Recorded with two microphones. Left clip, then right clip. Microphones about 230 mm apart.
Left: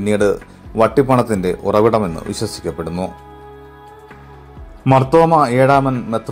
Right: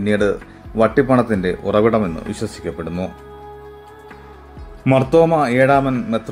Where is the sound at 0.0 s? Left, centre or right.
Centre.